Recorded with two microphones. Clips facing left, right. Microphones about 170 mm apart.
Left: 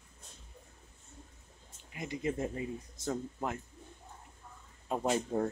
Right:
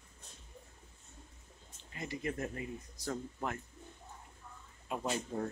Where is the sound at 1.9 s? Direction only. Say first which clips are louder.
Left 3 dB; 20° left (ahead or behind).